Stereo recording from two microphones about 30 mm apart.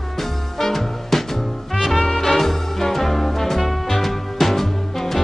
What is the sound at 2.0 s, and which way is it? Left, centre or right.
Music, left.